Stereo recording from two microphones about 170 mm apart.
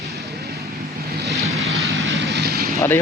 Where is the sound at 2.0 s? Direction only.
90° right; by 2.7 s 65° right (ahead or behind).